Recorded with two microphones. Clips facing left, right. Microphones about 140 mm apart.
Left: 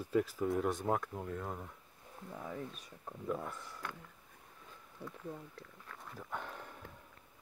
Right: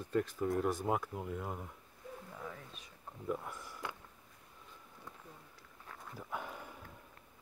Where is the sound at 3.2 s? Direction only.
10° right (ahead or behind).